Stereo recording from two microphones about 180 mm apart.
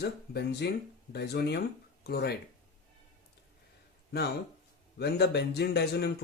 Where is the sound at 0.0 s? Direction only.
65° left (ahead or behind).